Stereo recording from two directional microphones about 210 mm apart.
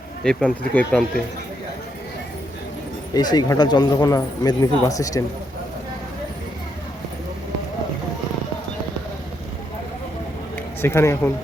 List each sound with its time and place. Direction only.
0.3 s speech: 5° left (ahead or behind)
3.2 s speech: 20° left (ahead or behind)
10.8 s speech: 10° left (ahead or behind)